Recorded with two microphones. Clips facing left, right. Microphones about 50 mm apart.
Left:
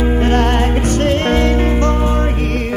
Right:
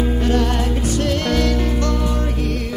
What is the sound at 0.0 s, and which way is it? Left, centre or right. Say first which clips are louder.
Music: left 4 dB; left.